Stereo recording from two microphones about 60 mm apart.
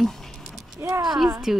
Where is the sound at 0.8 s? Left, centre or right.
Right.